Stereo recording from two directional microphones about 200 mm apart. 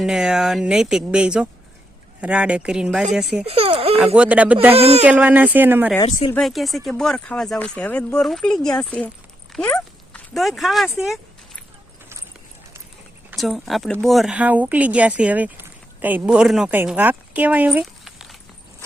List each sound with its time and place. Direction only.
0.0 s speech: 5° right (ahead or behind)
3.4 s speech: 30° right (ahead or behind)
3.9 s speech: 5° right (ahead or behind)
4.7 s speech: 30° right (ahead or behind)
5.0 s speech: 10° right (ahead or behind)
9.5 s dog: 5° left (ahead or behind)
10.1 s a sound: centre (ahead or behind)
13.3 s speech: centre (ahead or behind)